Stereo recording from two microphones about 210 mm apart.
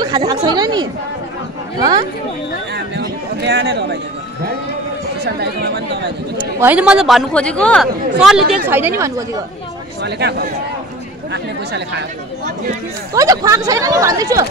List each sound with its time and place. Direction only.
0.0 s a woman's voice: 20° right (ahead or behind)
2.7 s a sound: 55° right (ahead or behind)
5.2 s speech: 50° right (ahead or behind)
6.6 s a man's voice: 5° right (ahead or behind)
10.0 s speech: 50° right (ahead or behind)
13.1 s speech: 15° right (ahead or behind)